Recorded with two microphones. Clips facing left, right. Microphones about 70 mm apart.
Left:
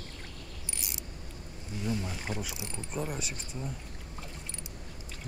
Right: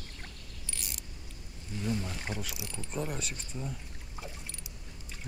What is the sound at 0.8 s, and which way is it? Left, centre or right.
Mechanisms, left.